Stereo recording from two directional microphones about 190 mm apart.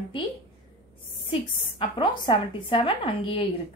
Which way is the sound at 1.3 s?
30° left (ahead or behind).